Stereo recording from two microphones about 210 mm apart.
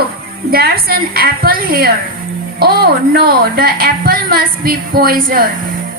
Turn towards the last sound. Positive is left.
turn(degrees=-40)  # may be behind; listen again after turning